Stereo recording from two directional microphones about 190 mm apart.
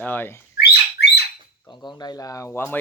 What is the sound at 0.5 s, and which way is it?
Rodents, 60° left (ahead or behind).